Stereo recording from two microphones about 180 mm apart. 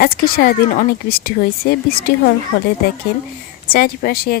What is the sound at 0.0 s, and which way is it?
Speech, 55° left (ahead or behind).